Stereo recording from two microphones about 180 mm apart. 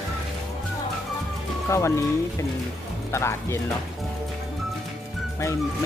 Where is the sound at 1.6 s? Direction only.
15° left (ahead or behind).